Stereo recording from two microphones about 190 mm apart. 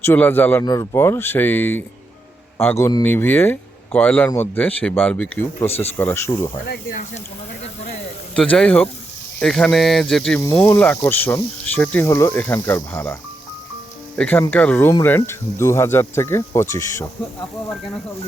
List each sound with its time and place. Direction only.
0.0 s speech: 10° left (ahead or behind)
6.7 s speech: 50° left (ahead or behind)
8.4 s speech: 5° left (ahead or behind)
10.4 s speech: 15° left (ahead or behind)
14.2 s speech: 10° left (ahead or behind)